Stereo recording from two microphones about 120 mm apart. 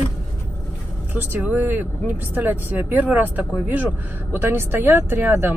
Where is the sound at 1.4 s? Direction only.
15° right (ahead or behind).